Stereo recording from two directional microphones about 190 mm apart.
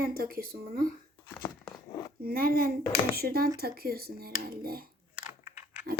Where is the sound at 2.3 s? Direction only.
50° right (ahead or behind).